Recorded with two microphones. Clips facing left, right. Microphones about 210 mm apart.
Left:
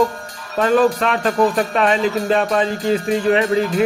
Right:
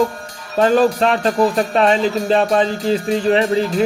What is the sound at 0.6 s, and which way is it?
Music, 35° right (ahead or behind).